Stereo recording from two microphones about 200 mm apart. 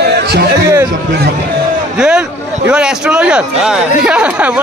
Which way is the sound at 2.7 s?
5° right (ahead or behind).